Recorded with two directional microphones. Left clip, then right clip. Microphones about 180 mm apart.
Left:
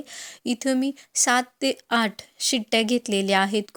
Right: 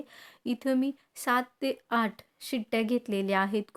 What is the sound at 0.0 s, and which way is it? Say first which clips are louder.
Speech: left 7 dB; 15° left (ahead or behind).